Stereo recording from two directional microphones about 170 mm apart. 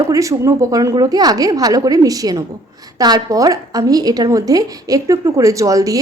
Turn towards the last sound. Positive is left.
turn(degrees=-20)  # may be behind; listen again after turning